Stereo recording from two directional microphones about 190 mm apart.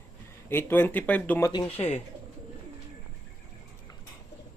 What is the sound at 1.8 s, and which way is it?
Speech, 35° left (ahead or behind).